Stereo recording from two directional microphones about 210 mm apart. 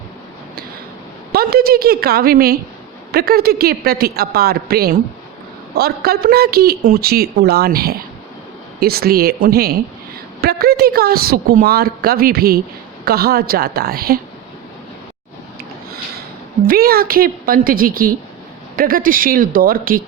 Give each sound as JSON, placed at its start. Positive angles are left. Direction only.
{"t": 1.3, "sound": "speech", "side_deg": -45}
{"t": 16.6, "sound": "speech", "side_deg": -45}